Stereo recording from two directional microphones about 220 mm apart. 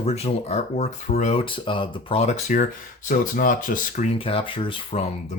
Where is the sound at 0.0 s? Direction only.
30° left (ahead or behind).